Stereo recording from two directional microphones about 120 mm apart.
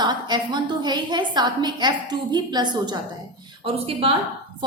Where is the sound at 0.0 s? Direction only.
40° right (ahead or behind).